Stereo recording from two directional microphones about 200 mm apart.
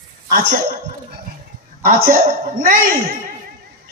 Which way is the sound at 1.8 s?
45° right (ahead or behind).